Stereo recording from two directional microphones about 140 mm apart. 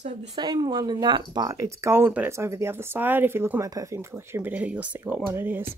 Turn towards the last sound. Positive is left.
turn(degrees=-15)  # may be behind; listen again after turning